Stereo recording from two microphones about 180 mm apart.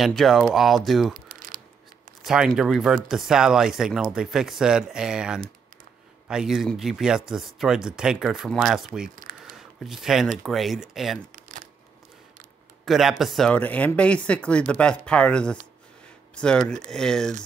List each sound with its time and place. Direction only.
0.0 s speech: centre (ahead or behind)
1.3 s a sound: 50° right (ahead or behind)
2.2 s speech: centre (ahead or behind)
12.8 s speech: centre (ahead or behind)